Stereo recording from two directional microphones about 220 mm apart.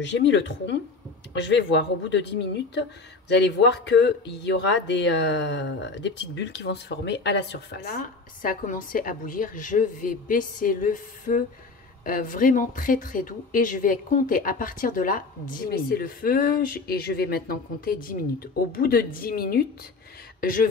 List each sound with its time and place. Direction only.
0.0 s speech: 55° left (ahead or behind); by 20.6 s 40° left (ahead or behind)